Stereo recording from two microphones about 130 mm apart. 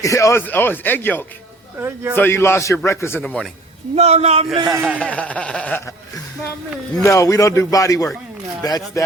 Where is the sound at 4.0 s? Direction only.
55° right (ahead or behind).